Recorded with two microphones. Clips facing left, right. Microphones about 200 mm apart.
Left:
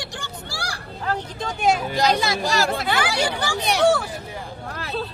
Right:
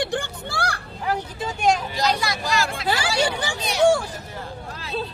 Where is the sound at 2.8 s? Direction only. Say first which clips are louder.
Even; 30° right (ahead or behind).